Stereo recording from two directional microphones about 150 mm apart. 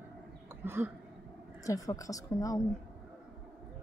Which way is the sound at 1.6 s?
20° left (ahead or behind).